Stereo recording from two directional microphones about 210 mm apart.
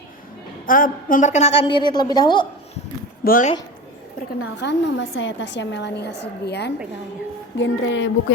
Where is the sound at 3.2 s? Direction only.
40° left (ahead or behind).